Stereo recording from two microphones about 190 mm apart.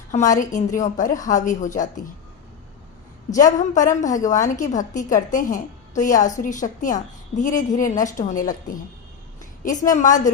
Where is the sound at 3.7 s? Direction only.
40° left (ahead or behind).